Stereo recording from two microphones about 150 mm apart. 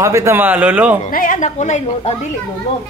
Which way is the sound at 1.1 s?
60° left (ahead or behind).